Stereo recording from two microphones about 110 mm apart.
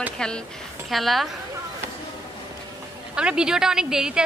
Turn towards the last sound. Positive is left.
turn(degrees=-5)  # may be behind; listen again after turning